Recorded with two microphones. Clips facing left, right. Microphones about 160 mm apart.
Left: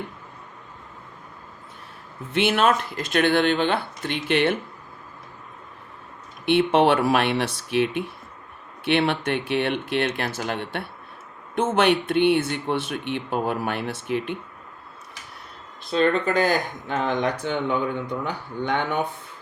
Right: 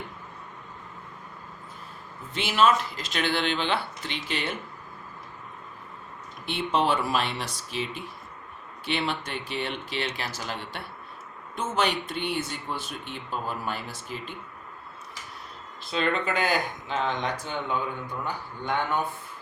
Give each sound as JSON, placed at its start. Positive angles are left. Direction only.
{"t": 2.3, "sound": "speech", "side_deg": 60}
{"t": 6.4, "sound": "speech", "side_deg": 65}
{"t": 15.9, "sound": "speech", "side_deg": 40}